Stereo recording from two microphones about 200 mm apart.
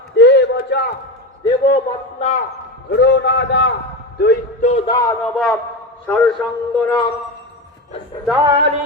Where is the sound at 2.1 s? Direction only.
35° left (ahead or behind).